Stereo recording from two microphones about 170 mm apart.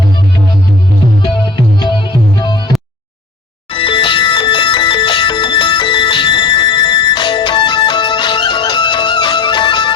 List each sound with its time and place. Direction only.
1.8 s music: 25° left (ahead or behind)
3.7 s music: 30° left (ahead or behind)